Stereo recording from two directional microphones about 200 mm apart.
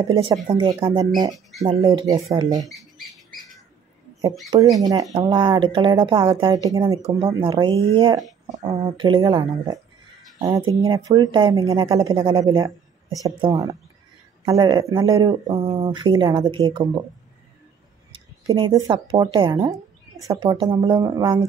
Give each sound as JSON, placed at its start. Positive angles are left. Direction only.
{"t": 0.5, "sound": "speech", "side_deg": -25}
{"t": 4.7, "sound": "speech", "side_deg": -15}
{"t": 10.9, "sound": "speech", "side_deg": -25}
{"t": 18.1, "sound": "speech", "side_deg": -20}